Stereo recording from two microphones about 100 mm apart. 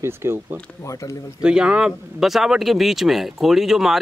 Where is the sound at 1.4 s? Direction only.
10° right (ahead or behind).